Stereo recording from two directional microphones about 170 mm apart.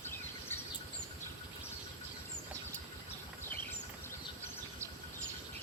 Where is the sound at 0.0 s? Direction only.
15° left (ahead or behind).